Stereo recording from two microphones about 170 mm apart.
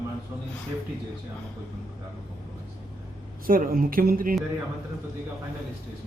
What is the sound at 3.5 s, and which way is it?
Speech, 55° right (ahead or behind).